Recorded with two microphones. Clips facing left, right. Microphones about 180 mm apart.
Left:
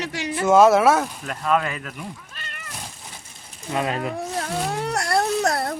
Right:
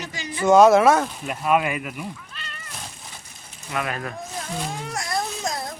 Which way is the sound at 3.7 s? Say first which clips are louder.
Left 4 dB; 25° left (ahead or behind).